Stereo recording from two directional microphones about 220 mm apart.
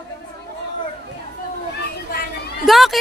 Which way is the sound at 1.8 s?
45° left (ahead or behind).